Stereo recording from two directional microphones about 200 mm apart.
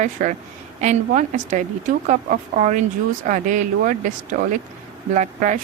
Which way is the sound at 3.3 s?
40° right (ahead or behind).